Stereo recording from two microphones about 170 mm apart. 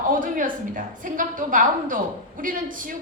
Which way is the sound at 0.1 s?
50° right (ahead or behind).